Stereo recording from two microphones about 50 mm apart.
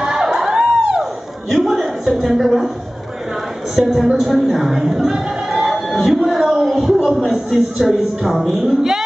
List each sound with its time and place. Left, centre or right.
0.0 s music: centre
1.5 s a woman's voice: centre
3.7 s a man's voice: centre